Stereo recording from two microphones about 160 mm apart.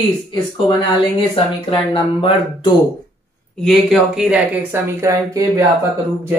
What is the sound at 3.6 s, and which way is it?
Speech, centre (ahead or behind).